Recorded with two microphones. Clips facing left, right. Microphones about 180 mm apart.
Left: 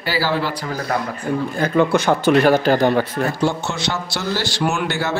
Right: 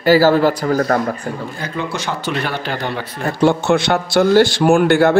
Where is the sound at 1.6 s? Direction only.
55° left (ahead or behind).